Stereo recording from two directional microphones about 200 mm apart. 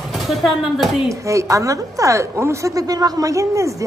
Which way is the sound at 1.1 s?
15° right (ahead or behind).